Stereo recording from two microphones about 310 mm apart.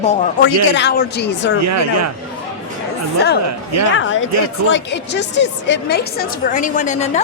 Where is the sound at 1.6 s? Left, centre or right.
Right.